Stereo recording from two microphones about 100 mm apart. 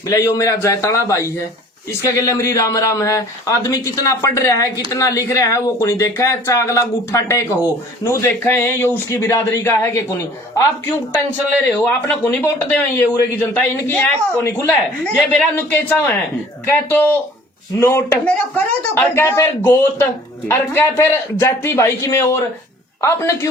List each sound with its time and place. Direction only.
0.1 s a man's voice: 35° left (ahead or behind); by 15.4 s 5° left (ahead or behind)
15.5 s speech: 20° left (ahead or behind)